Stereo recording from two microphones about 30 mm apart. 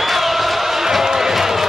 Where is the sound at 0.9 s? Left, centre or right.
Centre.